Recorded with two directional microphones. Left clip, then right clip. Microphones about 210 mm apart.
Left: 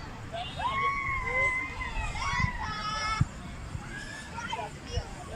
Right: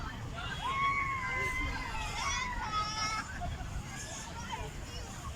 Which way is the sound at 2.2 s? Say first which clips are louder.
Left 5 dB; 40° left (ahead or behind).